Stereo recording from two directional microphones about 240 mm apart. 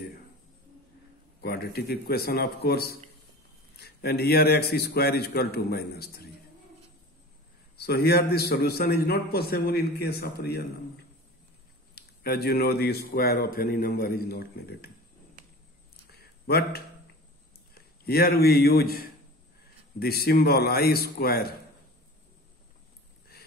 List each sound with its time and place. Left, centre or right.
1.4 s a man's voice: left
7.7 s a man's voice: left
11.9 s a man's voice: left
16.1 s a sound: left
17.7 s a man's voice: left